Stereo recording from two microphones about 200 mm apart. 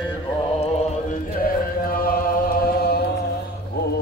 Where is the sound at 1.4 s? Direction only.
45° left (ahead or behind).